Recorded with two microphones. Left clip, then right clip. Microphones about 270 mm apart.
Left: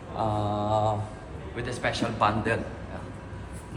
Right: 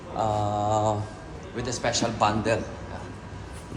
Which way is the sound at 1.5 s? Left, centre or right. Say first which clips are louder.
Right 2 dB; centre.